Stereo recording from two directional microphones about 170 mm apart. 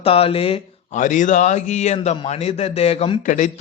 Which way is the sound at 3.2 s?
50° left (ahead or behind).